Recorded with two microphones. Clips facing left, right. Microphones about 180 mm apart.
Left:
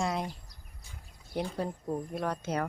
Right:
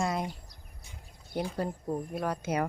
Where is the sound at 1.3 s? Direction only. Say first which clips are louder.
Right 1 dB; centre (ahead or behind).